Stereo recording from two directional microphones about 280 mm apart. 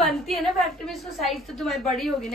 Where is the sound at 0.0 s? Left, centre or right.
Centre.